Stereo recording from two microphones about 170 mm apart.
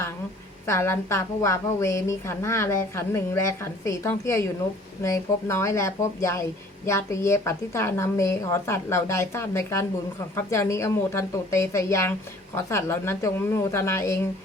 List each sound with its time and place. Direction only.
0.7 s a woman's voice: 15° left (ahead or behind)